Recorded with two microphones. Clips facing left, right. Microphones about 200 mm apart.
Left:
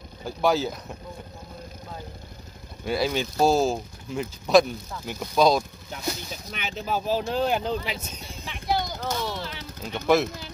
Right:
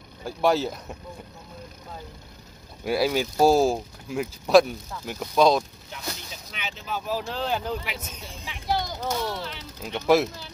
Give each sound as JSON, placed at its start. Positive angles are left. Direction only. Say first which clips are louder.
{"t": 0.2, "sound": "speech", "louder": "right 1 dB", "side_deg": 0}
{"t": 2.8, "sound": "speech", "louder": "right 2 dB", "side_deg": -10}
{"t": 6.5, "sound": "speech", "louder": "left 4 dB", "side_deg": 45}
{"t": 7.0, "sound": "speech", "louder": "left 3 dB", "side_deg": 25}
{"t": 7.2, "sound": "speech", "louder": "left 4 dB", "side_deg": 15}
{"t": 8.5, "sound": "a sound", "louder": "left 1 dB", "side_deg": 0}
{"t": 9.0, "sound": "speech", "louder": "right 1 dB", "side_deg": -5}